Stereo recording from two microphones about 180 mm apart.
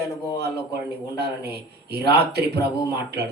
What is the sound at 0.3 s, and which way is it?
A man's voice, 65° right (ahead or behind).